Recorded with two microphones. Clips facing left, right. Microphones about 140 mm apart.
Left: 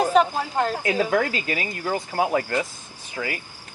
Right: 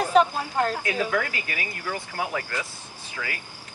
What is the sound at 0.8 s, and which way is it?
Speech, 30° left (ahead or behind).